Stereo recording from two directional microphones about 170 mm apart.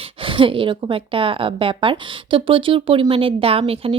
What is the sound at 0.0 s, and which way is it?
A woman's voice, 30° right (ahead or behind).